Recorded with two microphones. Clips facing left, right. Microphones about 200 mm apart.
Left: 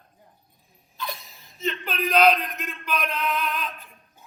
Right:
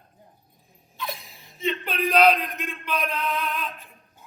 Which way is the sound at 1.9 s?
30° right (ahead or behind).